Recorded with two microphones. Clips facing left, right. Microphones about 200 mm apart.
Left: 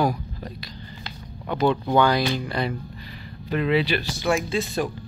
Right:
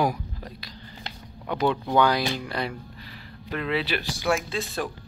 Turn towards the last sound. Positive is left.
turn(degrees=0)  # may be behind; listen again after turning